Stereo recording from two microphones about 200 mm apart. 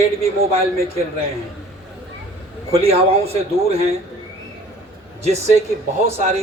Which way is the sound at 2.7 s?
30° right (ahead or behind).